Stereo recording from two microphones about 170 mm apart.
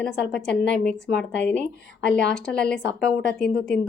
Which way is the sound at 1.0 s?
90° left.